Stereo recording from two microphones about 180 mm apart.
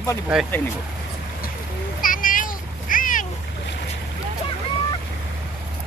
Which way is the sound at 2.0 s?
50° left (ahead or behind).